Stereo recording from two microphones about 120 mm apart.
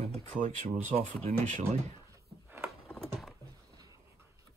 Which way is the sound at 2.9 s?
Centre (ahead or behind).